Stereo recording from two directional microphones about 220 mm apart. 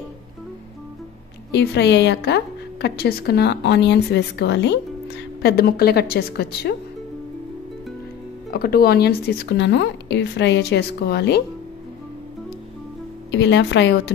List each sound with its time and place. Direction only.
1.5 s a woman's voice: 50° left (ahead or behind)
8.5 s a woman's voice: 45° left (ahead or behind)
13.3 s a woman's voice: 55° left (ahead or behind)